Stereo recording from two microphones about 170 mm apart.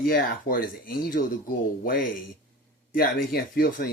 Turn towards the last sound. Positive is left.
turn(degrees=60)  # may be behind; listen again after turning